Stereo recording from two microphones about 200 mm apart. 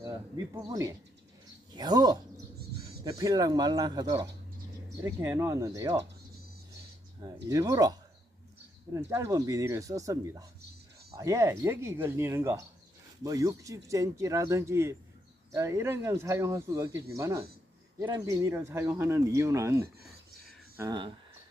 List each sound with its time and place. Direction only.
0.3 s speech: 15° right (ahead or behind)
7.4 s speech: 15° right (ahead or behind)